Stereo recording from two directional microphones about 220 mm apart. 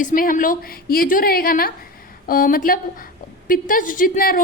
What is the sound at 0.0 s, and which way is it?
A woman's voice, 35° left (ahead or behind).